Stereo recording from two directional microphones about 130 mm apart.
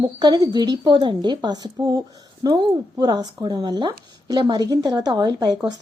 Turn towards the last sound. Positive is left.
turn(degrees=-30)  # may be behind; listen again after turning